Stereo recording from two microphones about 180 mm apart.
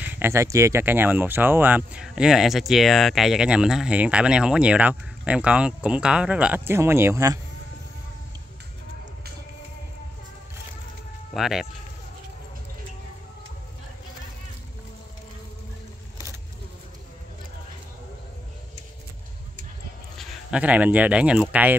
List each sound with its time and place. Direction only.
0.0 s speech: 10° right (ahead or behind)
11.3 s speech: centre (ahead or behind)
20.2 s speech: 5° right (ahead or behind)